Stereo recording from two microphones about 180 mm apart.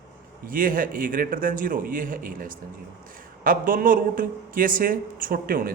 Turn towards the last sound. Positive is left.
turn(degrees=-55)  # may be behind; listen again after turning